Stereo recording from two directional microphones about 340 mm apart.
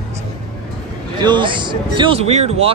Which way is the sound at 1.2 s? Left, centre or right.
Centre.